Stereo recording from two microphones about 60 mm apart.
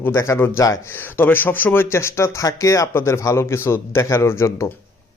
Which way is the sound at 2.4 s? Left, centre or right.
Left.